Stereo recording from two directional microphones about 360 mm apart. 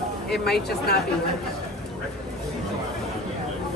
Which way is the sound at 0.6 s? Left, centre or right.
Left.